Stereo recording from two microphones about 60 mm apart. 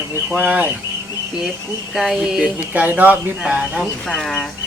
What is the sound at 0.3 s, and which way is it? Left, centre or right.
Speech, right.